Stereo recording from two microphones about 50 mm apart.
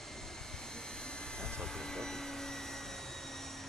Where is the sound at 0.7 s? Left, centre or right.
Centre.